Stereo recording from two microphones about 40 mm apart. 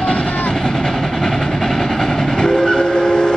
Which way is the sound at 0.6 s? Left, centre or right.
Centre.